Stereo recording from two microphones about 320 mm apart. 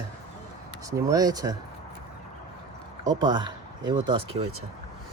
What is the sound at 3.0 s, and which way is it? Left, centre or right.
Speech, centre.